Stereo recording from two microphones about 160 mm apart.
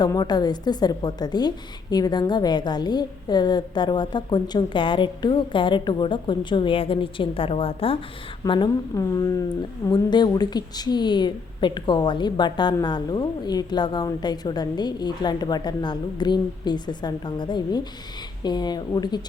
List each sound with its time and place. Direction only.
0.0 s speech: 25° left (ahead or behind)